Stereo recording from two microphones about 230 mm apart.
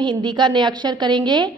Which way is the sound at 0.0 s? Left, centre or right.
Centre.